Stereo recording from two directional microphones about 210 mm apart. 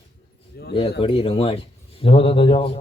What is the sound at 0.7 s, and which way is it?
A man's voice, 25° left (ahead or behind).